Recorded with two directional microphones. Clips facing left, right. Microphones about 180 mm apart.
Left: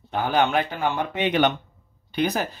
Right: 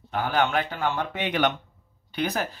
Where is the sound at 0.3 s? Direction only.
20° left (ahead or behind).